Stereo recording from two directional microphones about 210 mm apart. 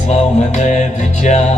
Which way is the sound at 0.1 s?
30° left (ahead or behind).